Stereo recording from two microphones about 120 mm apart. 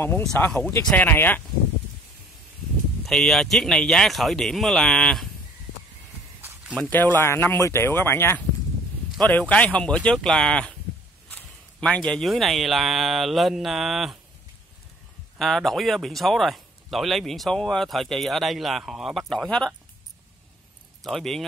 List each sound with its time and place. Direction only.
0.6 s speech: 20° left (ahead or behind)
3.1 s speech: 5° left (ahead or behind)
6.8 s speech: 15° left (ahead or behind); by 14.1 s centre (ahead or behind)
15.3 s speech: centre (ahead or behind)
21.0 s speech: centre (ahead or behind)